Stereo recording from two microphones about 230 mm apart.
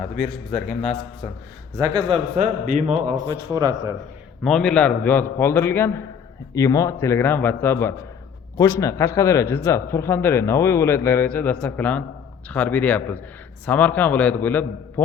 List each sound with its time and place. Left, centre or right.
0.5 s a man's voice: centre
1.7 s speech: centre; by 2.9 s right
3.2 s speech: centre
4.4 s speech: centre